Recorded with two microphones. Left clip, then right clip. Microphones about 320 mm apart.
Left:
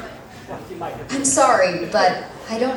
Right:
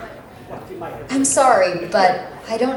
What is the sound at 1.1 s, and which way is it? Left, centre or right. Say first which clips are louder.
A woman's voice: right 2 dB; right.